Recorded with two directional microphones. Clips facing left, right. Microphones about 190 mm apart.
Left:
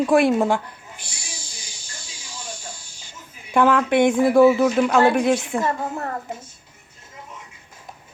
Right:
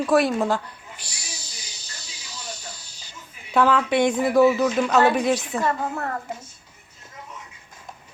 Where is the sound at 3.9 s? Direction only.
55° left (ahead or behind).